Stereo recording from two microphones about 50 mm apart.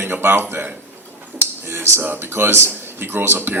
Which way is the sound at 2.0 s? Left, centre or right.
Right.